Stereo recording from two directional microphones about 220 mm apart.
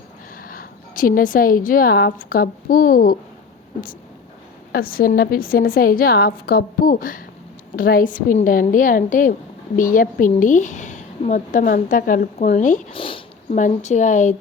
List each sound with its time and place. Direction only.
0.3 s speech: 40° left (ahead or behind)
4.7 s a woman's voice: 40° left (ahead or behind)